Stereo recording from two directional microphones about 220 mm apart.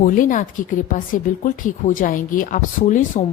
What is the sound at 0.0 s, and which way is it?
A woman's voice, 35° left (ahead or behind).